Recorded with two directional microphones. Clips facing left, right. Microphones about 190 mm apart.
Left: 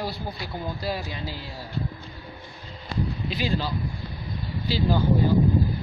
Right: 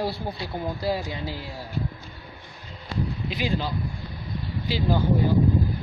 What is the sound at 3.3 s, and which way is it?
Speech, 15° right (ahead or behind).